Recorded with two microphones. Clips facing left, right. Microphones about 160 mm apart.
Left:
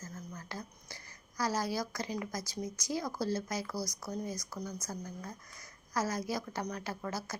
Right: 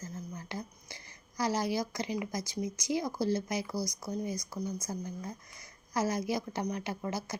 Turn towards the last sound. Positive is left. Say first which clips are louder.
# right 3 dB
turn(degrees=-20)  # may be behind; listen again after turning